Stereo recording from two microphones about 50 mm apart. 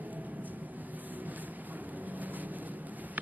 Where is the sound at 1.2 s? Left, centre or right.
Right.